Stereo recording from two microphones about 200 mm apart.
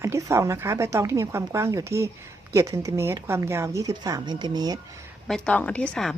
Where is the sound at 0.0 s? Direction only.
15° right (ahead or behind).